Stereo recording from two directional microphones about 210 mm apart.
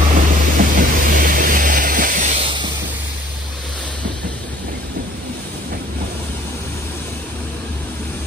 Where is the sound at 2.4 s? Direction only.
20° right (ahead or behind).